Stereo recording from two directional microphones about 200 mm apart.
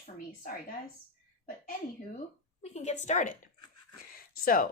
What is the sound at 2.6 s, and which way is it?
Speech, 35° left (ahead or behind).